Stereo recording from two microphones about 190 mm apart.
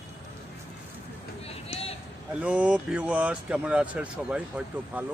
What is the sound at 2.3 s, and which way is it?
Speech, 5° right (ahead or behind).